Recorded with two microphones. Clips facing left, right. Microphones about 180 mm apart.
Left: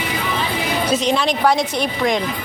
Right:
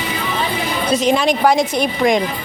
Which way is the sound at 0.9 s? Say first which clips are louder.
Right 4 dB; centre (ahead or behind).